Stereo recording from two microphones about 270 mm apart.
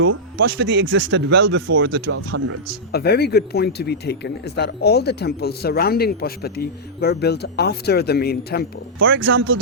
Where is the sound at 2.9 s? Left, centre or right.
Left.